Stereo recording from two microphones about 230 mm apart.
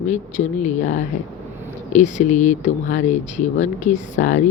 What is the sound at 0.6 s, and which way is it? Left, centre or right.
Speech, left.